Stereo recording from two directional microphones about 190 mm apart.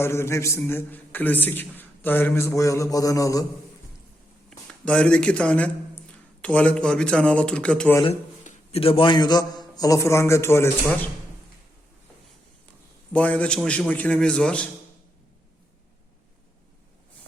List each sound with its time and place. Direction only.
0.0 s a man's voice: 15° left (ahead or behind)
4.4 s a man's voice: 5° left (ahead or behind)
8.4 s a man's voice: 30° left (ahead or behind); by 10.7 s 15° left (ahead or behind)
13.1 s a man's voice: 5° left (ahead or behind)